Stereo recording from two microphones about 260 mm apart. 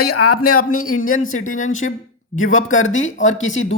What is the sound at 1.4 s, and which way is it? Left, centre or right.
Speech, left.